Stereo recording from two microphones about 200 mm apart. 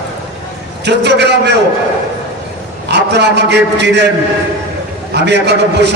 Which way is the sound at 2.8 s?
60° right (ahead or behind).